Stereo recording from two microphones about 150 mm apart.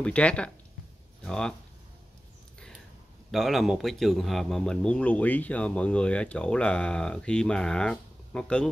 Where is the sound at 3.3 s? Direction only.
Centre (ahead or behind).